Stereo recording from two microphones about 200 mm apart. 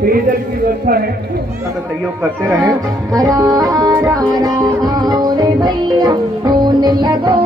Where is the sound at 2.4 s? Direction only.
15° right (ahead or behind).